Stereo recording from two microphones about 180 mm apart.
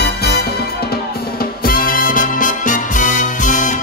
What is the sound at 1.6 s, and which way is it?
Music, 55° left (ahead or behind).